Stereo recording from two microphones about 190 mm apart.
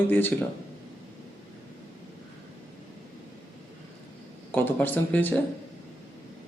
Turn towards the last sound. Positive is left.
turn(degrees=10)  # may be behind; listen again after turning